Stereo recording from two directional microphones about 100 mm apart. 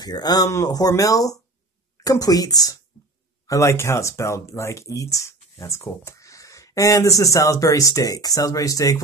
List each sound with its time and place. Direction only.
0.0 s speech: 40° left (ahead or behind)